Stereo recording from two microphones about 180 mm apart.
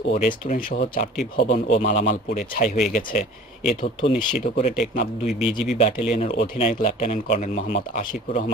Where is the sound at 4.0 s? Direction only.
30° left (ahead or behind).